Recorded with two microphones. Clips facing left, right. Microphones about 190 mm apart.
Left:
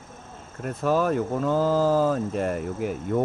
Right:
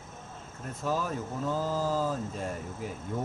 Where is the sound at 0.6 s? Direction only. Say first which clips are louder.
Left 9 dB; 70° left (ahead or behind).